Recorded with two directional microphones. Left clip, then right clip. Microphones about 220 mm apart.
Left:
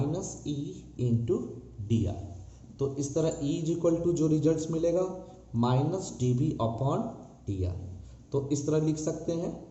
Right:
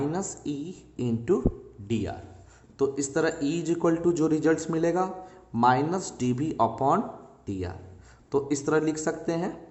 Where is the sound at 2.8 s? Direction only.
90° right.